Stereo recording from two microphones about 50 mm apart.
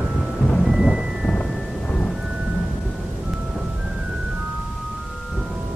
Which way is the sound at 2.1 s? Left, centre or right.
Centre.